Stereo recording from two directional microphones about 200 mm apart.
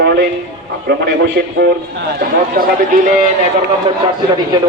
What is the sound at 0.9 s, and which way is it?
A man's voice, 55° right (ahead or behind).